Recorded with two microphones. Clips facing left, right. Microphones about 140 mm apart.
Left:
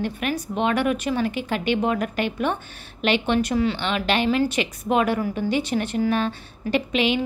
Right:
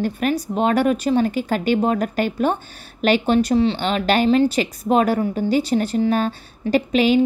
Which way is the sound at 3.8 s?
40° right (ahead or behind).